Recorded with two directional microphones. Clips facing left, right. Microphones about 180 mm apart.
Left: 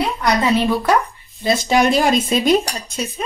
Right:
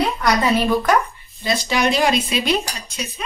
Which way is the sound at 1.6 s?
50° left (ahead or behind).